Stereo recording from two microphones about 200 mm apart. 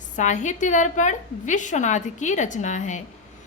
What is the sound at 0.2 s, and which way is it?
A woman's voice, 35° left (ahead or behind).